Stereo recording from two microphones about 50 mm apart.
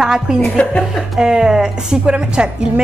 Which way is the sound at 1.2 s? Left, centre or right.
Centre.